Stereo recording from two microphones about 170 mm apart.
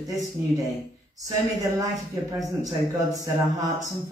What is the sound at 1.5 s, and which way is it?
Speech, 20° right (ahead or behind).